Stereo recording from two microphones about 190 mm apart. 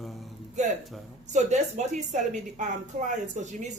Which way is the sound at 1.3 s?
40° right (ahead or behind).